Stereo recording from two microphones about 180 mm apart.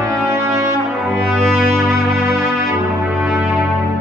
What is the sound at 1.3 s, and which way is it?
Music, centre (ahead or behind).